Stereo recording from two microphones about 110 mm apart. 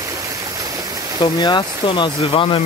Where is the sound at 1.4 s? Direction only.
45° left (ahead or behind).